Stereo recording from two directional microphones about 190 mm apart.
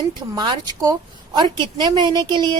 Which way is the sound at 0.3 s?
20° right (ahead or behind).